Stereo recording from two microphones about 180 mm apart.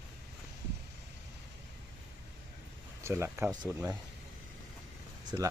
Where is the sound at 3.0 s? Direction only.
15° right (ahead or behind).